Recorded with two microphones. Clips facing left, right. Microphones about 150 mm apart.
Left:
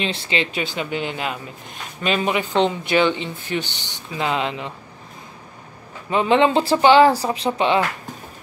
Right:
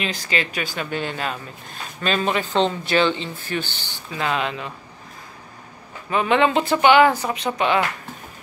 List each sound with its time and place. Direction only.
0.0 s speech: 30° left (ahead or behind)
6.0 s speech: 25° left (ahead or behind)